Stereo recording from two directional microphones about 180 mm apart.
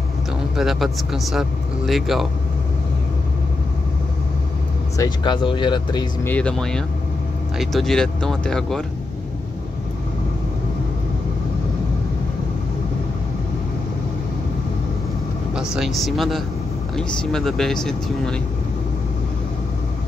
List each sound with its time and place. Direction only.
0.6 s speech: centre (ahead or behind)
4.9 s speech: 20° left (ahead or behind)
6.2 s speech: 5° left (ahead or behind)
15.7 s speech: centre (ahead or behind)